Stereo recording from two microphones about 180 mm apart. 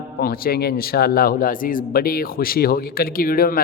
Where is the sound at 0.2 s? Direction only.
55° left (ahead or behind).